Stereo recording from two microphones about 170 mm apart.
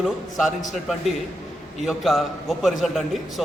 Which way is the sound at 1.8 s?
Centre (ahead or behind).